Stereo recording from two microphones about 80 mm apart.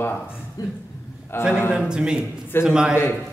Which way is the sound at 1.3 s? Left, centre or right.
Left.